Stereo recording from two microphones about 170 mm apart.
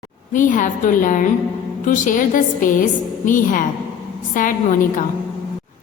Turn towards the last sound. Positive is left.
turn(degrees=50)  # may be behind; listen again after turning